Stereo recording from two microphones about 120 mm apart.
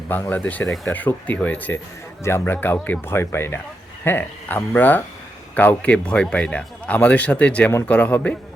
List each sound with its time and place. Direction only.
0.1 s a man's voice: 15° left (ahead or behind)